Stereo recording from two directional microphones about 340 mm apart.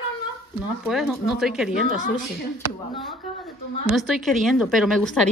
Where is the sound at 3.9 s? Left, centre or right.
Centre.